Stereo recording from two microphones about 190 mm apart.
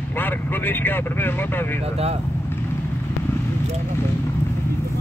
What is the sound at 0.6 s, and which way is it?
Speech, 10° left (ahead or behind).